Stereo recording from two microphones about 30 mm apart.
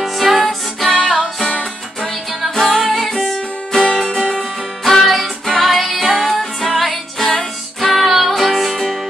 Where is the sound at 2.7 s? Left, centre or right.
Centre.